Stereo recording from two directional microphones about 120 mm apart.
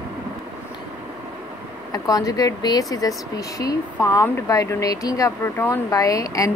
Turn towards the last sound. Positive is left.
turn(degrees=30)  # may be behind; listen again after turning